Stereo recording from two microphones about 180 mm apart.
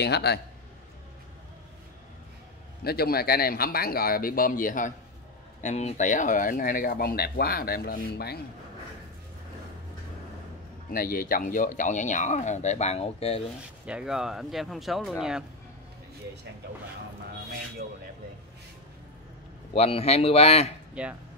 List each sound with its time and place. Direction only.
0.0 s a man's voice: 65° left (ahead or behind)
2.8 s a man's voice: 60° left (ahead or behind)
10.9 s speech: 55° left (ahead or behind); by 13.4 s 35° left (ahead or behind)
13.8 s speech: 5° right (ahead or behind)
19.7 s a man's voice: 35° left (ahead or behind)
20.9 s speech: 5° right (ahead or behind)